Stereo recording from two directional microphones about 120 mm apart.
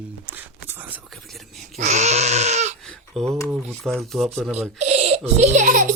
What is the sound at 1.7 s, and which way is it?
Dog, 80° right.